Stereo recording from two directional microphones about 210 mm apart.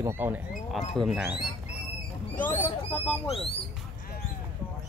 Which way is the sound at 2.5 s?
10° left (ahead or behind).